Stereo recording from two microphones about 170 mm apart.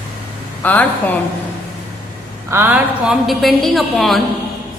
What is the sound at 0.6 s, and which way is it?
Speech, 10° left (ahead or behind).